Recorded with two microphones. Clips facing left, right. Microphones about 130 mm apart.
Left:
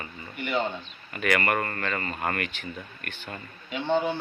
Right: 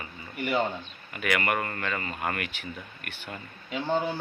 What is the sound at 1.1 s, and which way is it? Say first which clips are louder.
Speech: left 2 dB; 10° right (ahead or behind).